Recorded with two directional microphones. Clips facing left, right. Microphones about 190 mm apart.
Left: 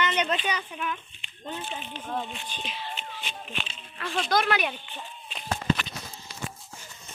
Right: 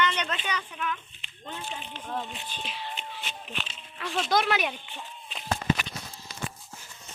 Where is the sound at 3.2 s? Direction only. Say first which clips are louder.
Left 1 dB; centre (ahead or behind).